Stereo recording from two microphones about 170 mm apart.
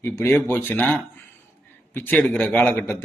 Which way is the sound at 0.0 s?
15° left (ahead or behind).